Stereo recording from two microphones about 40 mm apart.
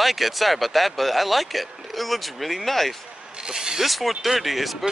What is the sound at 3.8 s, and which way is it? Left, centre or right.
Speech, centre.